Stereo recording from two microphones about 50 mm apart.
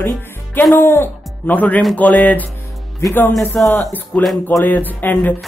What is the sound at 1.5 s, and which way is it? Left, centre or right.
Speech, left.